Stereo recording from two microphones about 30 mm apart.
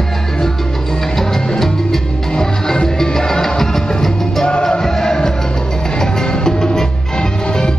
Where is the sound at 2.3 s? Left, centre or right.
Left.